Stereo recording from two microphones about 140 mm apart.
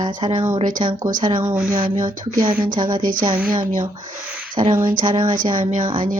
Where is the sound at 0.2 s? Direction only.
40° right (ahead or behind).